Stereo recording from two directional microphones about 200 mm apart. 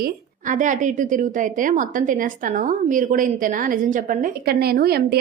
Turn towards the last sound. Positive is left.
turn(degrees=-50)  # may be behind; listen again after turning